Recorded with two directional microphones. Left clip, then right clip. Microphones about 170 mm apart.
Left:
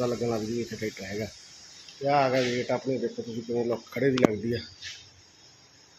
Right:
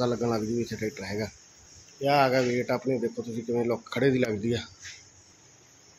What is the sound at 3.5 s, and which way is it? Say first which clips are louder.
Speech: right 1 dB; 25° right (ahead or behind).